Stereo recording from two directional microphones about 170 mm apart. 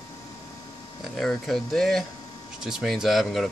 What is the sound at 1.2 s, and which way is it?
Speech, centre (ahead or behind).